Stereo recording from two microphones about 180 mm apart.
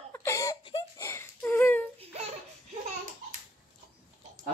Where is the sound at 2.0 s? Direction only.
35° right (ahead or behind).